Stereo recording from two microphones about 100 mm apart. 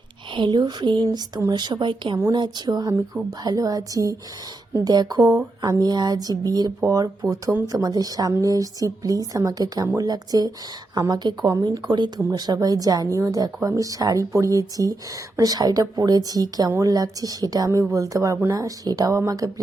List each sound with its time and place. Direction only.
0.3 s speech: 50° right (ahead or behind); by 19.6 s 35° right (ahead or behind)